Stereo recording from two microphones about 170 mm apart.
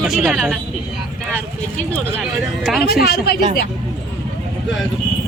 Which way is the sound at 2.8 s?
70° left (ahead or behind).